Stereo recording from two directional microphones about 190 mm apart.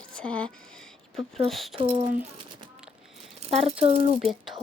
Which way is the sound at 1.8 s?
25° right (ahead or behind).